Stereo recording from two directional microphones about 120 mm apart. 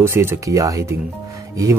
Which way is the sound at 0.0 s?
20° right (ahead or behind).